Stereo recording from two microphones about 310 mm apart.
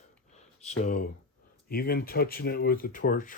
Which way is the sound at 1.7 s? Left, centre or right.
Left.